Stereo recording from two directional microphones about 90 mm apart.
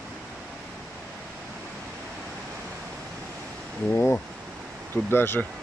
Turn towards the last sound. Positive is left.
turn(degrees=25)  # may be behind; listen again after turning